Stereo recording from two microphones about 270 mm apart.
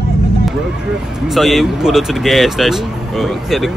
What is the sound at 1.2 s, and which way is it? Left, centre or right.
Speech, centre.